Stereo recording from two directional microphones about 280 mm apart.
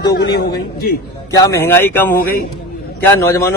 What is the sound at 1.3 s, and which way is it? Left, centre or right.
Speech, centre.